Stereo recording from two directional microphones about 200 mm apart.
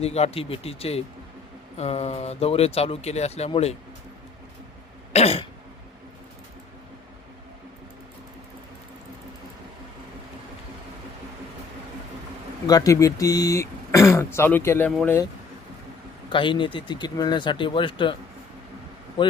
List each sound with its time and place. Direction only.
0.0 s speech: 30° left (ahead or behind)
5.1 s throat clearing: 30° left (ahead or behind)
12.6 s speech: 15° left (ahead or behind)
16.3 s speech: 25° left (ahead or behind)